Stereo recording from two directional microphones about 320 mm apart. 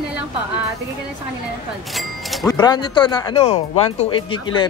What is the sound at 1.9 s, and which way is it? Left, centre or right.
Music, centre.